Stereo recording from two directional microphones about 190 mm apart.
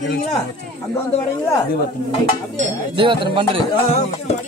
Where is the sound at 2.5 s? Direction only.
30° right (ahead or behind).